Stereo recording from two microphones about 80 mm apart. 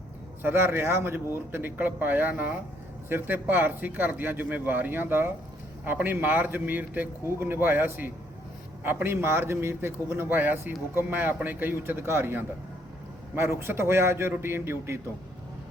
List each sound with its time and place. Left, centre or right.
0.4 s a man's voice: right